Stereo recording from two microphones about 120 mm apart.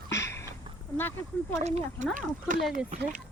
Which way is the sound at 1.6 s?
70° right (ahead or behind).